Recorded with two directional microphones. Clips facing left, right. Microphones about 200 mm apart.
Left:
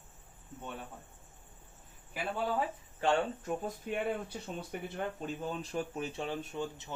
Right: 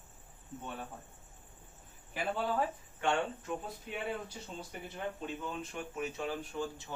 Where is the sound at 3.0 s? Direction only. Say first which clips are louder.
Left 3 dB; 40° left (ahead or behind).